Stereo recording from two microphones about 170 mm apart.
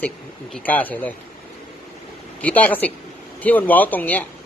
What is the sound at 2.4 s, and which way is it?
A woman's voice, 10° left (ahead or behind).